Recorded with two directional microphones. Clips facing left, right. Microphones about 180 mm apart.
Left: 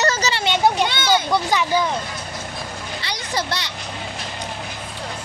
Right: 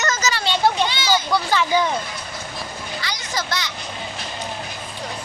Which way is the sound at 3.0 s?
30° left (ahead or behind).